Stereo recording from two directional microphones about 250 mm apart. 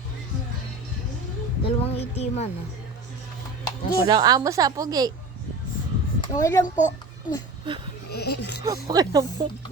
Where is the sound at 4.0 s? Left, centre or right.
Centre.